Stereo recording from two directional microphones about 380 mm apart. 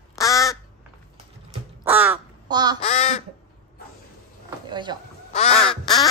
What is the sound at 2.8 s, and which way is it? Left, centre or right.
Speech, centre.